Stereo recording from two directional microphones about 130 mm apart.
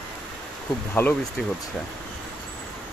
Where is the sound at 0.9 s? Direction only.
15° left (ahead or behind).